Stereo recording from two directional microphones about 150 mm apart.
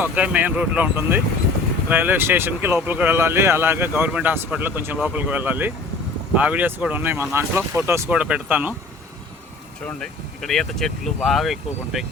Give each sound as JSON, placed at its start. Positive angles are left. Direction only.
{"t": 0.0, "sound": "speech", "side_deg": -10}
{"t": 9.8, "sound": "speech", "side_deg": 5}